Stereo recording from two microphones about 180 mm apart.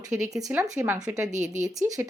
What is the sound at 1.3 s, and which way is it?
Speech, 40° right (ahead or behind).